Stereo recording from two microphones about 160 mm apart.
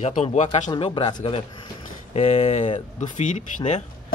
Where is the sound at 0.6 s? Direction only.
30° left (ahead or behind).